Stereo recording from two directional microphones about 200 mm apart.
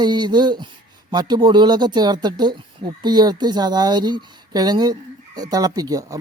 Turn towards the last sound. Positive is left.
turn(degrees=-15)  # may be behind; listen again after turning